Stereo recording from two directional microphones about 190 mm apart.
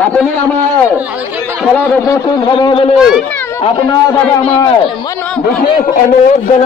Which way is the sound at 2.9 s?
5° right (ahead or behind).